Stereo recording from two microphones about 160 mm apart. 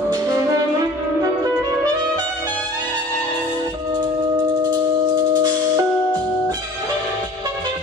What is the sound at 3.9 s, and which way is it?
Music, 25° right (ahead or behind).